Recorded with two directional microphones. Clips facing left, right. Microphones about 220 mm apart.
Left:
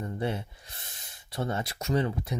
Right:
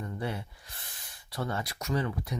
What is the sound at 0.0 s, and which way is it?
Speech, 25° left (ahead or behind).